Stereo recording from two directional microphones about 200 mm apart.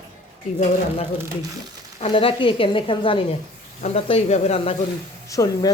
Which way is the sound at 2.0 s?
25° left (ahead or behind).